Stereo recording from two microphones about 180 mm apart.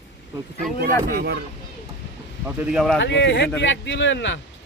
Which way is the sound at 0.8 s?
55° right (ahead or behind).